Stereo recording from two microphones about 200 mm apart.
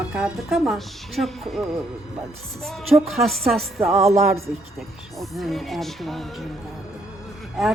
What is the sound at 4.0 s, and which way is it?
Speech, 30° right (ahead or behind).